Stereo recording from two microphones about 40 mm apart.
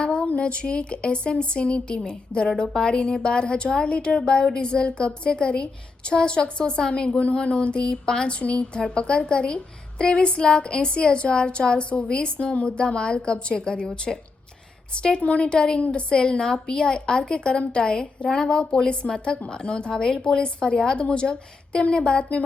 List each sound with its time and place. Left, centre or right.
0.0 s a woman's voice: left